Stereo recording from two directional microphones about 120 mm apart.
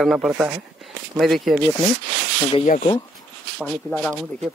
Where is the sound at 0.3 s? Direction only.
15° right (ahead or behind).